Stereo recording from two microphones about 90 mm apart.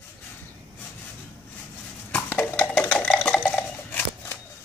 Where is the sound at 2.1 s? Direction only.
20° left (ahead or behind).